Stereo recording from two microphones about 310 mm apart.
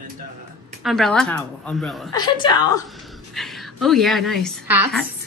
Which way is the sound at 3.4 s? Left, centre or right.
Centre.